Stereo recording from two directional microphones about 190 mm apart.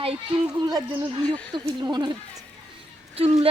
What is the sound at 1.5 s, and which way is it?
A woman's voice, 25° right (ahead or behind).